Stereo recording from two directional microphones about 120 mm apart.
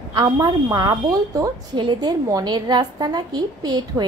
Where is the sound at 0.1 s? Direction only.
35° right (ahead or behind).